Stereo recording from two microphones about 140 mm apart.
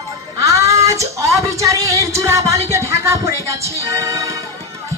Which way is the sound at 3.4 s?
20° right (ahead or behind).